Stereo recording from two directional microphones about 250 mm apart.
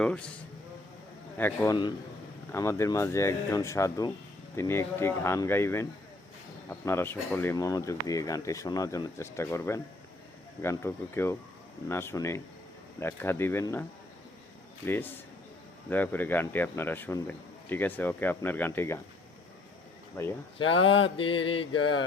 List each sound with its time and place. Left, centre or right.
0.0 s a man's voice: centre
1.4 s speech: centre
14.8 s speech: centre
21.0 s mantra: left
21.8 s mantra: left